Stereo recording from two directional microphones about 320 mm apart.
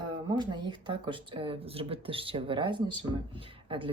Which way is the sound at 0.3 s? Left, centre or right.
Centre.